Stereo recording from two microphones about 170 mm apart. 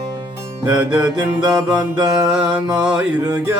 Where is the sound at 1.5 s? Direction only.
20° right (ahead or behind).